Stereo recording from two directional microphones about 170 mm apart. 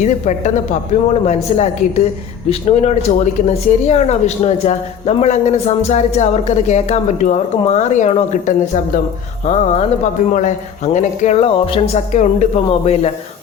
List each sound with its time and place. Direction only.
0.0 s a woman's voice: 45° left (ahead or behind)